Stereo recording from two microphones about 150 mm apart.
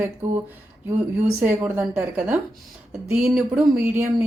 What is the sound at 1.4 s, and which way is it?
Speech, 15° right (ahead or behind).